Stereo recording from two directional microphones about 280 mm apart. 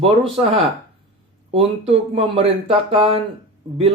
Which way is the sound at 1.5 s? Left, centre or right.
Right.